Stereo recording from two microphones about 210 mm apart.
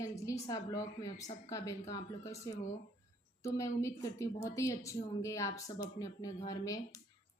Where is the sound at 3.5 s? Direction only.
15° left (ahead or behind).